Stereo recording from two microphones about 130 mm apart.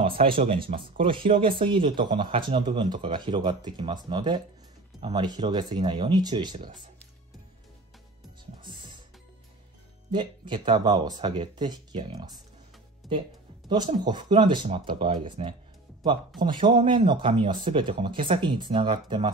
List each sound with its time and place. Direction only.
0.0 s speech: 40° right (ahead or behind)
8.6 s music: 40° right (ahead or behind)
10.1 s speech: 40° right (ahead or behind)
13.0 s speech: centre (ahead or behind)
13.7 s speech: 35° right (ahead or behind)